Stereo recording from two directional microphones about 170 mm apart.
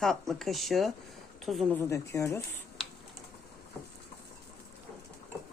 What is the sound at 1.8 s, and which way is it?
Speech, 15° left (ahead or behind).